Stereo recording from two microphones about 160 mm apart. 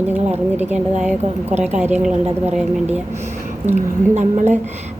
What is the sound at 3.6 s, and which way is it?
Speech, 45° right (ahead or behind).